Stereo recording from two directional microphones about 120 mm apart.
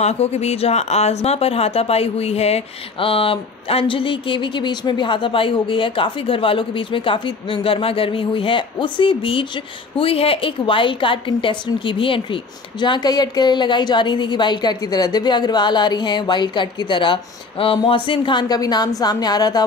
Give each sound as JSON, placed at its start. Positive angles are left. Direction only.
{"t": 0.0, "sound": "a woman's voice", "side_deg": 65}